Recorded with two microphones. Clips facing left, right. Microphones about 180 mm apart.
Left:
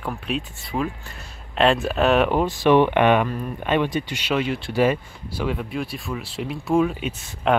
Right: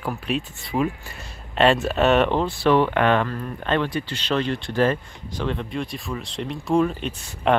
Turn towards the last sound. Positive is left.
turn(degrees=5)  # may be behind; listen again after turning